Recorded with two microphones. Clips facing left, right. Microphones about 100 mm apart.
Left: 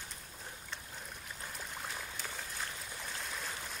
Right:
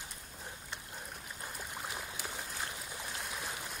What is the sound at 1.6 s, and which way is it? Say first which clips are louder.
Stream: right 1 dB; 10° right (ahead or behind).